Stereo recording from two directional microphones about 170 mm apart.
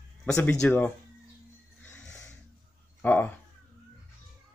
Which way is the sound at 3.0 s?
10° left (ahead or behind).